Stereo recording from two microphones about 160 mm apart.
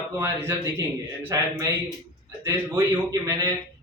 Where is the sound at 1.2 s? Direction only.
20° right (ahead or behind).